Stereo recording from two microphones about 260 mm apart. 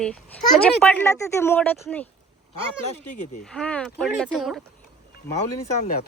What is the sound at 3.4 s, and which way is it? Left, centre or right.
Speech, centre.